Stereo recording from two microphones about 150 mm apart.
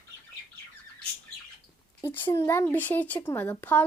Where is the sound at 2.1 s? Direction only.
15° left (ahead or behind).